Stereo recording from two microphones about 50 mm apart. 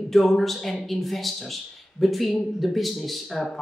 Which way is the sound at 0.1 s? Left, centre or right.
Centre.